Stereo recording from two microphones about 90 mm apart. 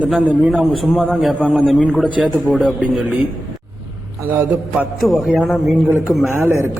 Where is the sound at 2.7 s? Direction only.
15° right (ahead or behind).